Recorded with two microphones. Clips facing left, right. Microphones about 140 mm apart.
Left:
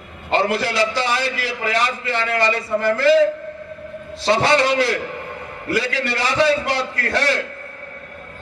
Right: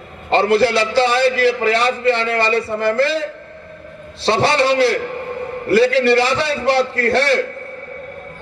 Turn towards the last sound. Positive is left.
turn(degrees=-30)  # may be behind; listen again after turning